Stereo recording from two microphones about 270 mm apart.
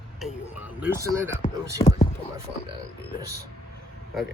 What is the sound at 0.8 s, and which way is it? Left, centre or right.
Speech, centre.